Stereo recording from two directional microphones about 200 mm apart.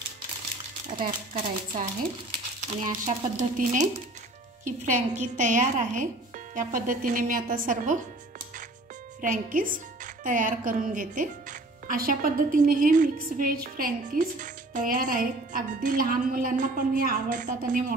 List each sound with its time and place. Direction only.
0.8 s speech: 40° right (ahead or behind)
3.1 s speech: 40° right (ahead or behind)
9.2 s speech: 40° right (ahead or behind)